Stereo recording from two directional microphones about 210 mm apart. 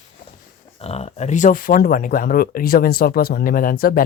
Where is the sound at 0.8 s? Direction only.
30° left (ahead or behind).